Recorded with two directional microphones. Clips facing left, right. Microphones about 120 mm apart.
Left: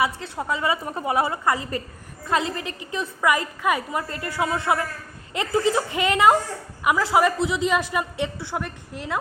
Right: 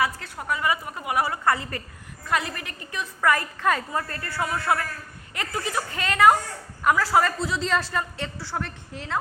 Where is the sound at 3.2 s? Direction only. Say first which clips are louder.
Even; 15° left (ahead or behind).